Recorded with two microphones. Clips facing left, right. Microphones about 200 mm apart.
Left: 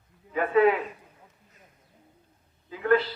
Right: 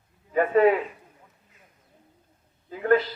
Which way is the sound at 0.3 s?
45° right (ahead or behind).